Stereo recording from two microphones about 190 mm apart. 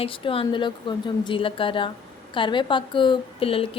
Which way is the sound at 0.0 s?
30° left (ahead or behind).